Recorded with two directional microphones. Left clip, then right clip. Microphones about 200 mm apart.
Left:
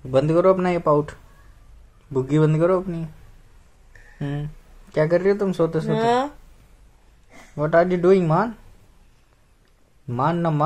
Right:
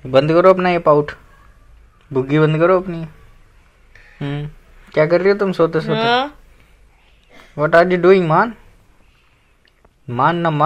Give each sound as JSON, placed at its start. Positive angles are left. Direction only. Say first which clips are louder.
{"t": 0.1, "sound": "speech", "louder": "right 6 dB", "side_deg": 0}
{"t": 2.1, "sound": "speech", "louder": "right 5 dB", "side_deg": 0}
{"t": 4.2, "sound": "speech", "louder": "right 4 dB", "side_deg": 0}
{"t": 5.9, "sound": "speech", "louder": "right 3 dB", "side_deg": 40}
{"t": 7.5, "sound": "speech", "louder": "right 6 dB", "side_deg": 0}
{"t": 10.0, "sound": "speech", "louder": "right 6 dB", "side_deg": 0}